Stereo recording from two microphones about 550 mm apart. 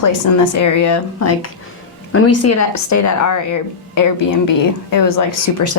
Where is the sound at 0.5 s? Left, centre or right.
Left.